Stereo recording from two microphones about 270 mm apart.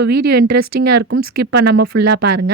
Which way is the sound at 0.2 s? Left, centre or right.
Right.